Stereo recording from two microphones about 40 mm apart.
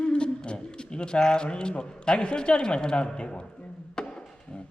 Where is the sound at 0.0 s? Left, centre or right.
Left.